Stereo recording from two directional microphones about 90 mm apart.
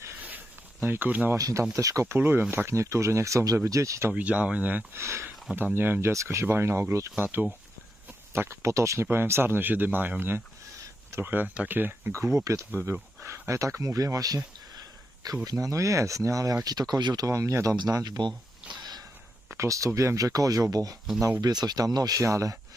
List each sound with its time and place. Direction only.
0.8 s speech: 20° right (ahead or behind)
1.4 s speech: 40° right (ahead or behind)
2.1 s speech: 25° right (ahead or behind)
4.1 s speech: 15° right (ahead or behind)
4.9 s speech: 30° right (ahead or behind)
7.2 s speech: 20° right (ahead or behind); by 14.4 s 40° right (ahead or behind)
15.4 s speech: 40° right (ahead or behind)
16.6 s speech: 50° right (ahead or behind)
17.2 s speech: 35° right (ahead or behind); by 18.3 s 55° right (ahead or behind)
18.7 s a sound: 50° right (ahead or behind)
19.5 s speech: 35° right (ahead or behind)